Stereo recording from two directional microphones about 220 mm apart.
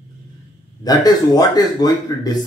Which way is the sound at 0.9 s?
15° left (ahead or behind).